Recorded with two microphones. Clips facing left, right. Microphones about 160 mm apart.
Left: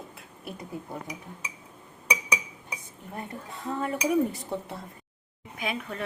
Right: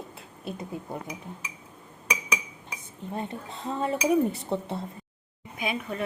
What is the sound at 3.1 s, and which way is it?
Speech, 25° right (ahead or behind).